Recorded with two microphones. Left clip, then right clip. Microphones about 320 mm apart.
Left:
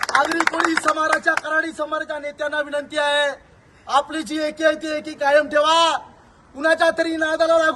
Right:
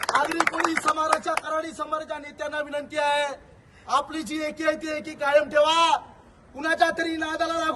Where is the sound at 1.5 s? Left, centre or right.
Centre.